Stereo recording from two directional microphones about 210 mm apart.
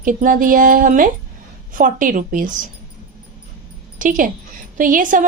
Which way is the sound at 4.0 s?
40° right (ahead or behind).